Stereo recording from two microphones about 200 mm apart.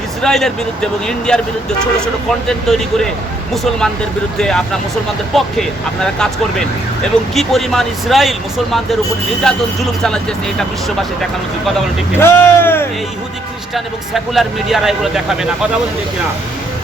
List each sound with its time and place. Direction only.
0.2 s speech: centre (ahead or behind)
2.5 s speech: centre (ahead or behind)
4.4 s speech: 5° left (ahead or behind)
12.2 s speech: 10° left (ahead or behind)
13.7 s speech: centre (ahead or behind)